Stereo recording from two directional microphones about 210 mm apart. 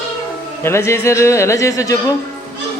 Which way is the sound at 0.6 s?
10° left (ahead or behind).